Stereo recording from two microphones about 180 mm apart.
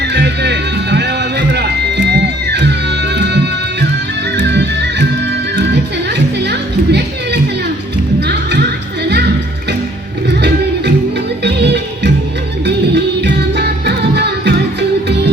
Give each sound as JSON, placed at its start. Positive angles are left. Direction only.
{"t": 0.0, "sound": "music", "side_deg": -70}
{"t": 11.4, "sound": "music", "side_deg": -70}